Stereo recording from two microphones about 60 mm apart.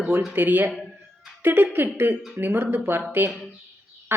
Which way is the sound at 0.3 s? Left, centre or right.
Right.